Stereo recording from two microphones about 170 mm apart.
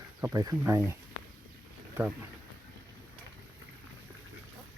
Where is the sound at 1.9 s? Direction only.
10° right (ahead or behind).